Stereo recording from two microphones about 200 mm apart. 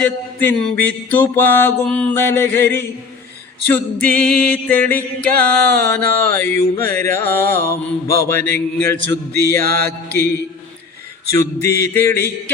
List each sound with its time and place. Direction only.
0.0 s music: 10° left (ahead or behind)
9.6 s mantra: 50° right (ahead or behind)
11.3 s music: 15° left (ahead or behind)